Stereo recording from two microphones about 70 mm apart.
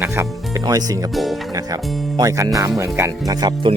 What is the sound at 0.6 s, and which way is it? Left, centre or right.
Speech, right.